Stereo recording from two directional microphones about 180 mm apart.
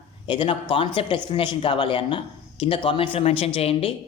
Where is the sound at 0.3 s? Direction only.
30° left (ahead or behind).